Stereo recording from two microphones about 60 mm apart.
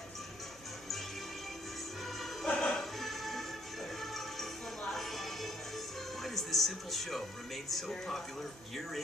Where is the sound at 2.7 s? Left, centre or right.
Centre.